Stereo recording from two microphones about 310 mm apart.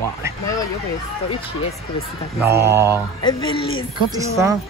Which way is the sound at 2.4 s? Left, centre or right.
Centre.